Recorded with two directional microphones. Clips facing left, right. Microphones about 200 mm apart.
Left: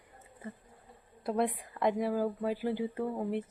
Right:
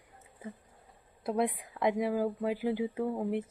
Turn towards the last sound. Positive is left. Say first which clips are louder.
# right 1 dB
turn(degrees=-5)  # may be behind; listen again after turning